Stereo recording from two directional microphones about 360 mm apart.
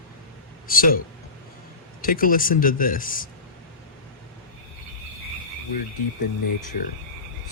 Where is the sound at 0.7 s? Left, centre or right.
Left.